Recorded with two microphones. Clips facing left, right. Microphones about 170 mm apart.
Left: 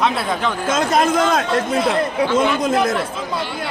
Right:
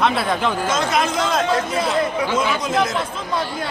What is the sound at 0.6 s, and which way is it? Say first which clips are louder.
Speech: left 7 dB; 50° left (ahead or behind).